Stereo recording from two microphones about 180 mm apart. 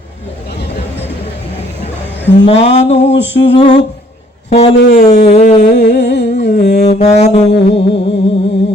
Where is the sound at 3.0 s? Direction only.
80° left.